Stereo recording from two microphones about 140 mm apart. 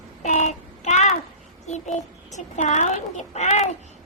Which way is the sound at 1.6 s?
55° left (ahead or behind).